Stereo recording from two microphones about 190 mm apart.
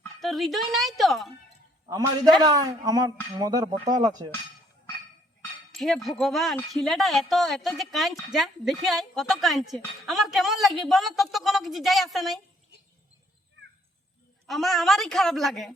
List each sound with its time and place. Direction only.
0.2 s speech: centre (ahead or behind)
1.9 s speech: 20° right (ahead or behind)
5.4 s speech: centre (ahead or behind)
14.4 s speech: centre (ahead or behind)